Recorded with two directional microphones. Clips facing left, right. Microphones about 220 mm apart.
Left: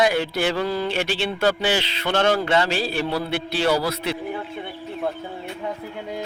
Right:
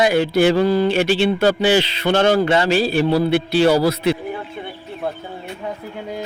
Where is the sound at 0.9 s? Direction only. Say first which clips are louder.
Right 8 dB; 5° right (ahead or behind).